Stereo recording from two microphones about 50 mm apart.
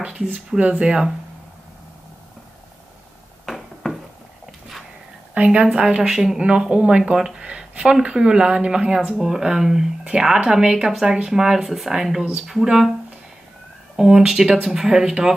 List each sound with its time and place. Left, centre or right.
0.0 s speech: right
3.4 s a sound: centre
5.3 s speech: right
6.0 s speech: centre
7.4 s speech: right; by 12.8 s centre
13.9 s speech: centre